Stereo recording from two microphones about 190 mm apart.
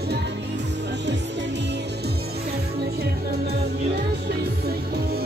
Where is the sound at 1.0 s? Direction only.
65° right (ahead or behind).